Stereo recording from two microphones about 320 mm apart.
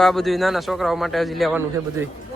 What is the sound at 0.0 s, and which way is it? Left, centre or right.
Speech, centre.